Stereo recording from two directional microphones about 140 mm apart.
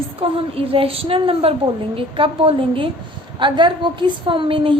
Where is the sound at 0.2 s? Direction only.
40° right (ahead or behind).